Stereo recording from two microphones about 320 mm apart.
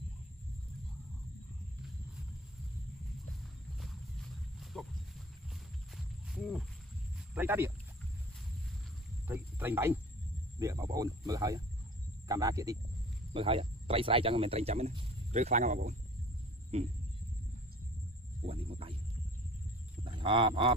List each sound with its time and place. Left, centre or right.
3.8 s wild animals: centre
5.9 s a sound: centre
7.3 s speech: centre
9.3 s speech: centre; by 16.0 s right
18.4 s speech: centre
20.0 s goose: centre